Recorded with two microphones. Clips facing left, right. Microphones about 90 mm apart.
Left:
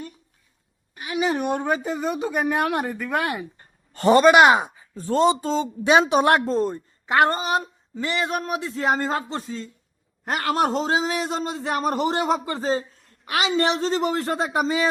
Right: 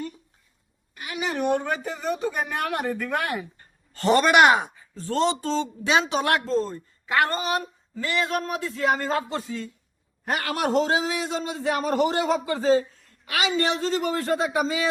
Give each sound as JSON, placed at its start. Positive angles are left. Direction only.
{"t": 0.9, "sound": "a woman's voice", "side_deg": 20}
{"t": 4.7, "sound": "speech", "side_deg": 15}